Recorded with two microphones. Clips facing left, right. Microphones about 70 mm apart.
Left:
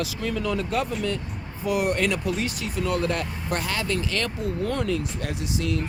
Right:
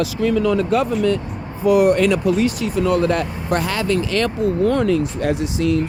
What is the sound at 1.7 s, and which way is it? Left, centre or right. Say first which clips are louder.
Speech: right 10 dB; right.